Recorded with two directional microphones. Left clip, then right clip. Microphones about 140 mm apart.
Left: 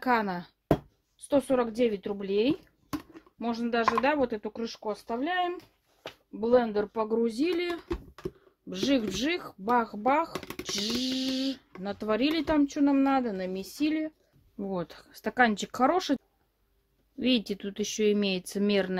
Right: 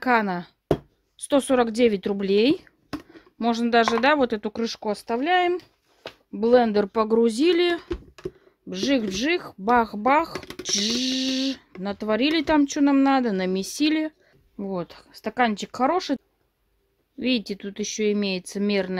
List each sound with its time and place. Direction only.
0.0 s a sound: 45° right (ahead or behind)
1.1 s speech: 80° right
4.0 s speech: 75° right (ahead or behind)
8.6 s speech: 35° right (ahead or behind); by 10.3 s 55° right (ahead or behind)
10.3 s a sound: 5° right (ahead or behind)
10.6 s a sound: 50° right (ahead or behind)
11.8 s speech: 35° right (ahead or behind); by 14.1 s 70° right (ahead or behind)
14.6 s speech: 20° right (ahead or behind)
17.2 s speech: 10° right (ahead or behind)